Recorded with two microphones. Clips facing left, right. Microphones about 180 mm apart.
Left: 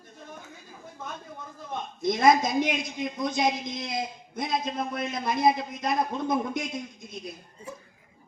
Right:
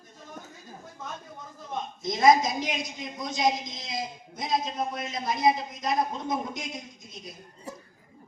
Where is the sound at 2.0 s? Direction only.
55° left (ahead or behind).